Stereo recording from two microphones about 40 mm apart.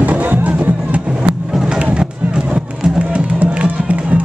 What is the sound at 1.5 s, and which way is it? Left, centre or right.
Music, centre.